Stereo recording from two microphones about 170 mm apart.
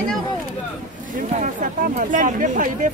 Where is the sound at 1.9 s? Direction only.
50° right (ahead or behind).